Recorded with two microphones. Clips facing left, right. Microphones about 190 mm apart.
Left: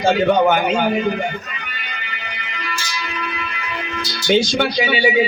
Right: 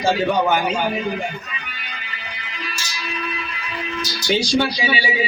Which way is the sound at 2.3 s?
65° left (ahead or behind).